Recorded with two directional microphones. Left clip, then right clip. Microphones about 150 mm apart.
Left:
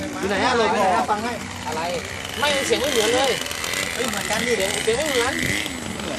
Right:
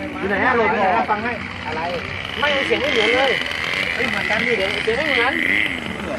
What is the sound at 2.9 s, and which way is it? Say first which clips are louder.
Speech: right 5 dB; 90° left.